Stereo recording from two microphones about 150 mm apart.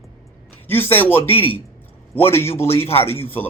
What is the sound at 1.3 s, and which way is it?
Speech, 35° left (ahead or behind).